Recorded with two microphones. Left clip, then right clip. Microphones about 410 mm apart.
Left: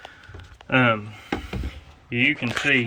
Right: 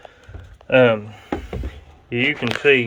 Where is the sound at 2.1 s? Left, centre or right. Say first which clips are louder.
Right 1 dB; right.